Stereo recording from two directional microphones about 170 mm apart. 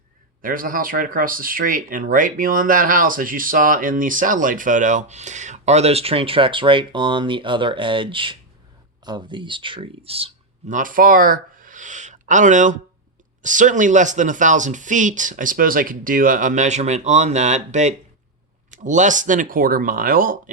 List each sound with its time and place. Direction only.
0.4 s speech: 55° right (ahead or behind); by 10.3 s 35° right (ahead or behind)
10.7 s speech: 50° right (ahead or behind)